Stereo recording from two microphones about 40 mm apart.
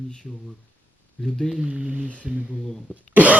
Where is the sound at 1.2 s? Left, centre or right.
Left.